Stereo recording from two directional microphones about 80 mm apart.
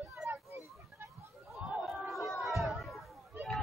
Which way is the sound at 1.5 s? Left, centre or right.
Centre.